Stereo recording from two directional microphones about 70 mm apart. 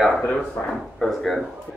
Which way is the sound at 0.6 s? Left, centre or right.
Left.